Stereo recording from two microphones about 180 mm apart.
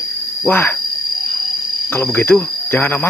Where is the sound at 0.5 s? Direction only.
10° left (ahead or behind).